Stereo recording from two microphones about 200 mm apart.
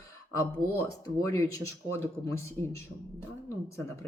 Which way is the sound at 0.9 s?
15° left (ahead or behind).